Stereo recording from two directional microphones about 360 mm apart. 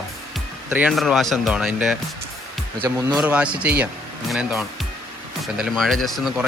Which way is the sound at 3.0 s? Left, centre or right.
Centre.